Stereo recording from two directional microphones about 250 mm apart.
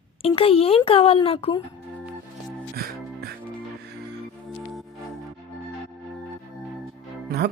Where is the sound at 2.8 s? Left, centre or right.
Right.